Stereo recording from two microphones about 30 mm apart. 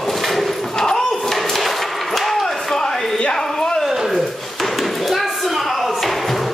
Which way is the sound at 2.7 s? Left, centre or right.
Centre.